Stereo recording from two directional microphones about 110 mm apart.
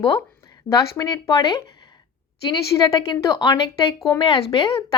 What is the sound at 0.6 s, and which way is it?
Speech, 30° left (ahead or behind).